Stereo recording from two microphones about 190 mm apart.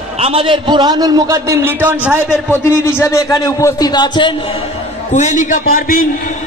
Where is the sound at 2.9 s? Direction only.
15° left (ahead or behind).